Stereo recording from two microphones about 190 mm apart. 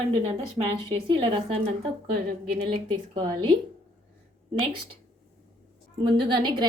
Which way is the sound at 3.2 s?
25° right (ahead or behind).